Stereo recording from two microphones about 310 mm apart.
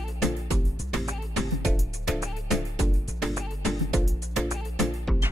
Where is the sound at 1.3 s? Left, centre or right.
Centre.